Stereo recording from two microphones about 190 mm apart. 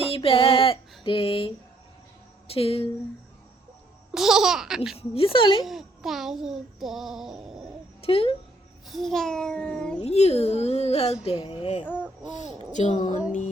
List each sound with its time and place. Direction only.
0.1 s a sound: 30° left (ahead or behind)
2.5 s a child's voice: 30° left (ahead or behind)
4.1 s a child's voice: centre (ahead or behind)
4.9 s a woman's voice: 30° left (ahead or behind)
5.6 s a child's voice: centre (ahead or behind)
8.0 s a woman's voice: 30° left (ahead or behind)
8.9 s a child's voice: centre (ahead or behind)
10.0 s a child's voice: 35° left (ahead or behind)
12.7 s a child's voice: 40° left (ahead or behind)